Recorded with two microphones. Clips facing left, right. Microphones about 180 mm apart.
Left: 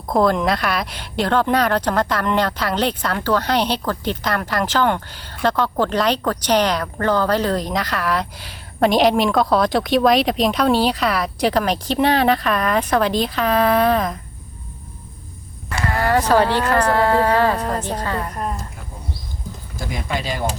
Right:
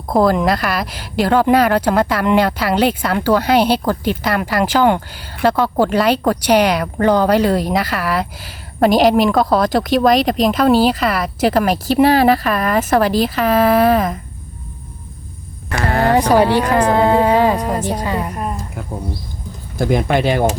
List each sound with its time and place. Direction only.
0.1 s a woman's voice: 5° right (ahead or behind)
15.8 s speech: 60° right (ahead or behind)
16.0 s speech: 15° right (ahead or behind)
19.8 s speech: 60° right (ahead or behind)